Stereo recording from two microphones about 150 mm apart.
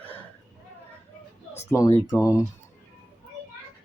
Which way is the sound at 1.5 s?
20° left (ahead or behind).